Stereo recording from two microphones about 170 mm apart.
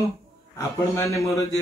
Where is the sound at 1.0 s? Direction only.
20° left (ahead or behind).